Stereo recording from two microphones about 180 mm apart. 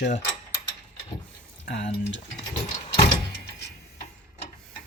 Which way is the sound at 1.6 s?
80° left.